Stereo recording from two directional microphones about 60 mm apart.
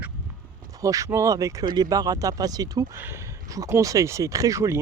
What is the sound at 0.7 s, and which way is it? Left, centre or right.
Speech, right.